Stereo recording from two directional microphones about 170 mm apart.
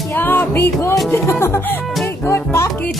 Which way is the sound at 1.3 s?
15° left (ahead or behind).